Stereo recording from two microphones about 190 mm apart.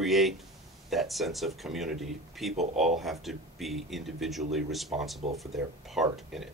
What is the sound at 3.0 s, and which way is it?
Speech, centre (ahead or behind).